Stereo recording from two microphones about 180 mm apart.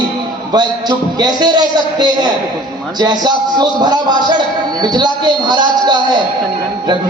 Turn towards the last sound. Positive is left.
turn(degrees=-25)  # may be behind; listen again after turning